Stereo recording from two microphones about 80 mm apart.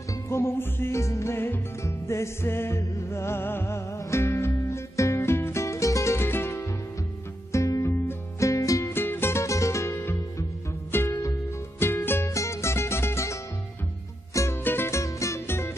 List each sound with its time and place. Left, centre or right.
0.3 s music: left
7.5 s music: left
8.9 s music: left